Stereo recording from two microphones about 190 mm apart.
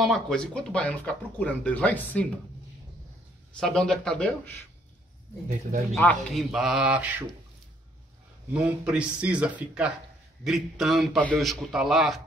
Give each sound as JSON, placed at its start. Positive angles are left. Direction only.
{"t": 0.0, "sound": "speech", "side_deg": 5}
{"t": 3.5, "sound": "a man's voice", "side_deg": 5}
{"t": 5.5, "sound": "speech", "side_deg": -40}
{"t": 5.9, "sound": "a man's voice", "side_deg": 0}
{"t": 8.6, "sound": "a man's voice", "side_deg": -5}